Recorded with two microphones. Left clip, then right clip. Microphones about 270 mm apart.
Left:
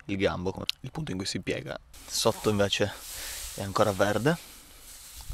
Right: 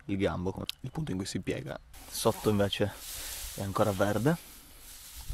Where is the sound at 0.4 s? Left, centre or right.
Left.